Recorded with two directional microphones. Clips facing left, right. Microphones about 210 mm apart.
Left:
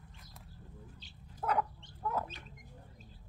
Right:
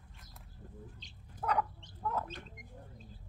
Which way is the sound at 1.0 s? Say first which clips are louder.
Even; 5° left (ahead or behind).